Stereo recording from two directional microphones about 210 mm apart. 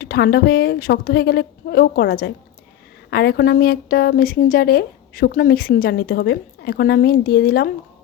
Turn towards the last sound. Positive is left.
turn(degrees=45)  # may be behind; listen again after turning